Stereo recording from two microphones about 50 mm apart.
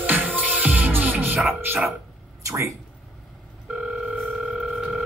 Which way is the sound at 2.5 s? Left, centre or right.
Right.